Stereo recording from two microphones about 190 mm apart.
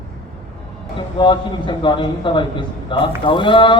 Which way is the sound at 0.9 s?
25° left (ahead or behind).